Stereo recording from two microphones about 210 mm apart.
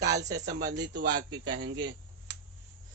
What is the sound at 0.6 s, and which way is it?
Speech, 55° right (ahead or behind).